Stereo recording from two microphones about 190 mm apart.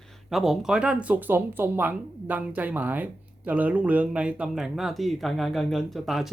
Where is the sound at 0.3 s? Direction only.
Centre (ahead or behind).